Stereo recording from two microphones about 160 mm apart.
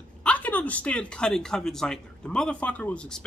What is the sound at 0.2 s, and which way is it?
Speech, 10° left (ahead or behind).